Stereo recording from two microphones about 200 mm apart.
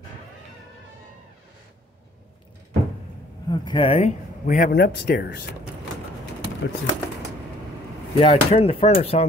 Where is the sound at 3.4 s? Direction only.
25° left (ahead or behind); by 5.4 s 55° left (ahead or behind).